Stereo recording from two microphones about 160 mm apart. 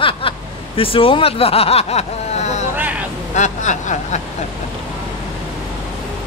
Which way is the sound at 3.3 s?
50° left (ahead or behind).